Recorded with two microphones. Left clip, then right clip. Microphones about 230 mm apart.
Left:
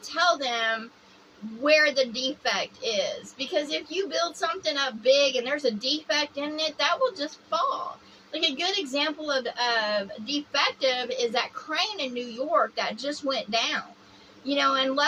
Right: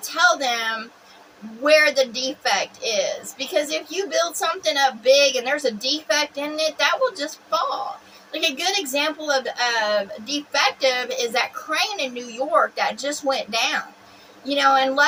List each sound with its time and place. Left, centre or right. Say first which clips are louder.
0.1 s a woman's voice: right 5 dB; centre
12.1 s a woman's voice: right 4 dB; centre
12.5 s a woman's voice: right 5 dB; centre